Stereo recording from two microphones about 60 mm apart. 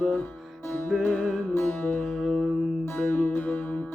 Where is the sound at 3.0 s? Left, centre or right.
Left.